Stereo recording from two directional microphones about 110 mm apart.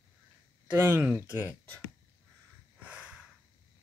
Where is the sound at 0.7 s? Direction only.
20° right (ahead or behind).